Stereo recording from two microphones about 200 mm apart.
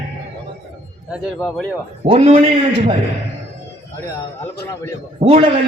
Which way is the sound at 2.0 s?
30° right (ahead or behind).